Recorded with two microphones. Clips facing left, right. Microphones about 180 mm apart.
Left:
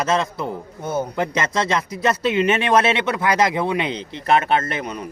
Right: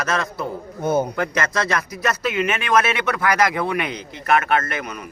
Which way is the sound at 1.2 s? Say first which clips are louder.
Left 1 dB; 20° left (ahead or behind).